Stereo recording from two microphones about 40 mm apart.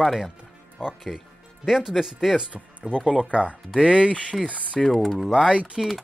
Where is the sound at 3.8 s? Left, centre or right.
Right.